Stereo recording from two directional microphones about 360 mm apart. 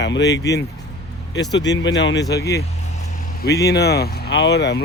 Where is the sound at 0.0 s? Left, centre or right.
Left.